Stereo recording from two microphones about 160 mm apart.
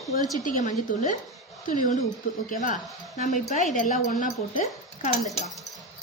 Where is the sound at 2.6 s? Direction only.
50° left (ahead or behind).